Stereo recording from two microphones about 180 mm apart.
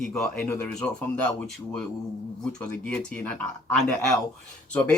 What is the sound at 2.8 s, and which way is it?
Speech, 5° left (ahead or behind).